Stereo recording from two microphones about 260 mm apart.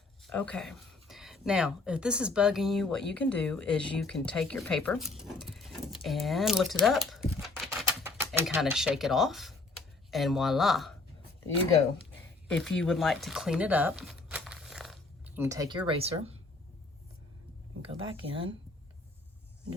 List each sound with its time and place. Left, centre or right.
0.2 s speech: centre
7.4 s typewriter: centre
10.1 s speech: centre
12.5 s speech: centre; by 16.3 s right
17.8 s speech: right